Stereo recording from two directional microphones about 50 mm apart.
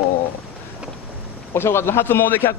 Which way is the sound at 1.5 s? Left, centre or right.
Left.